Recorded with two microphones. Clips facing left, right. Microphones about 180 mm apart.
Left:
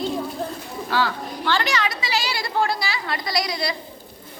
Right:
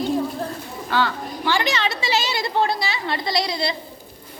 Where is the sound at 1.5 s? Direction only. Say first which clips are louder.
Right 2 dB; 15° right (ahead or behind).